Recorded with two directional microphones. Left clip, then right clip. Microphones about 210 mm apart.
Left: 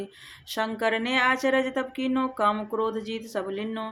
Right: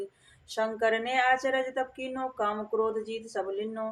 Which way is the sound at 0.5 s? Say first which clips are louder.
Left 1 dB; 45° left (ahead or behind).